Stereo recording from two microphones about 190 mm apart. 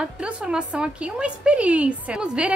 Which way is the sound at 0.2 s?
5° right (ahead or behind).